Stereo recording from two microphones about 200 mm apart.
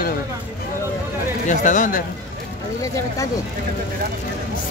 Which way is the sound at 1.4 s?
40° left (ahead or behind).